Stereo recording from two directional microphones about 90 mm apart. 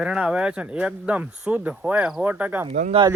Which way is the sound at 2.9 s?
90° right.